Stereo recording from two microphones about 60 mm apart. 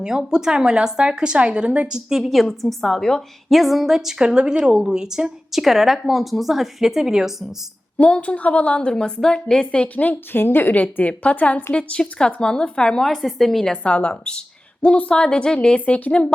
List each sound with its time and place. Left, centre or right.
0.0 s a woman's voice: centre
7.9 s a woman's voice: left
9.9 s a woman's voice: left; by 13.7 s centre
13.8 s a woman's voice: centre